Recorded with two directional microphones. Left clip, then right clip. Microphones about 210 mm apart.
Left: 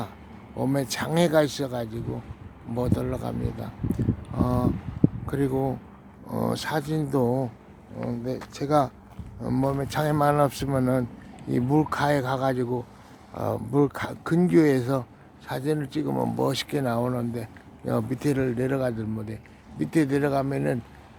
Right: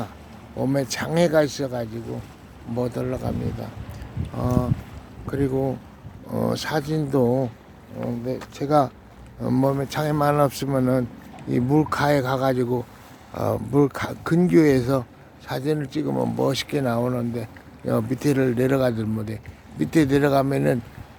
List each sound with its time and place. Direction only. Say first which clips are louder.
0.6 s speech: right 3 dB; 10° left (ahead or behind)
6.2 s speech: right 3 dB; centre (ahead or behind)
9.8 s speech: right 1 dB; 5° left (ahead or behind); by 20.7 s 15° right (ahead or behind)